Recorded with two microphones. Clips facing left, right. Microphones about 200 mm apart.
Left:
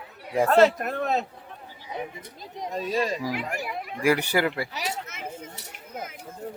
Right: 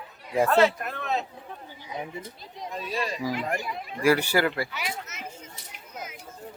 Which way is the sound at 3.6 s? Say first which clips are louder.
Even; 15° left (ahead or behind).